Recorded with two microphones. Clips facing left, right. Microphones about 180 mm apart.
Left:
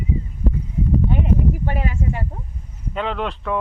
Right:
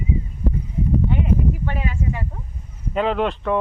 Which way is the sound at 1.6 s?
40° left (ahead or behind).